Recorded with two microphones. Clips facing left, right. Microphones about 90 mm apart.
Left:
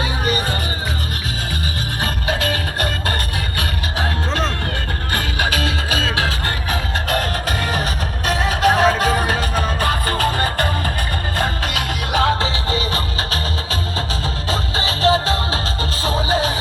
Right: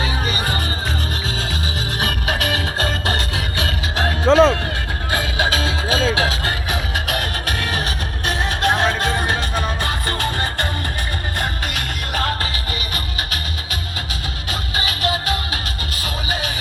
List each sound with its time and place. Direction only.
2.4 s music: 20° right (ahead or behind)
4.3 s music: 90° right
5.1 s music: 20° right (ahead or behind)
7.4 s music: centre (ahead or behind)
12.4 s music: 30° left (ahead or behind)
14.5 s music: 30° left (ahead or behind)